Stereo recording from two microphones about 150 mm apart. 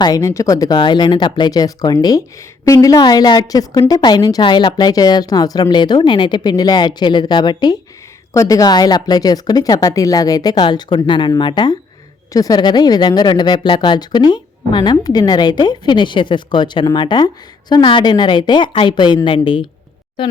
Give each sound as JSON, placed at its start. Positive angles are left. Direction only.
{"t": 0.0, "sound": "speech", "side_deg": 20}